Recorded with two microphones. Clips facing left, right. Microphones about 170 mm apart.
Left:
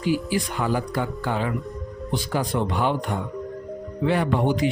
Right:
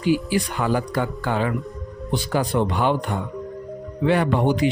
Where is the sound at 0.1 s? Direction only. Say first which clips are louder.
Right 3 dB; 70° right (ahead or behind).